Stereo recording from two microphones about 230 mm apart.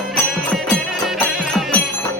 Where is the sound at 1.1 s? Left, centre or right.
Centre.